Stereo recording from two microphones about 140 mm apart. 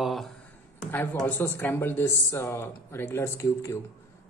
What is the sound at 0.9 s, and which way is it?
A woman's voice, 15° left (ahead or behind).